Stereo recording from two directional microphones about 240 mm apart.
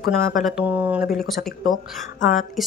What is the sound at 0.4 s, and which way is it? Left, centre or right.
Speech, centre.